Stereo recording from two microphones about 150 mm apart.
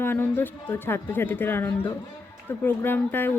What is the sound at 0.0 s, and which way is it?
Speech, 15° left (ahead or behind).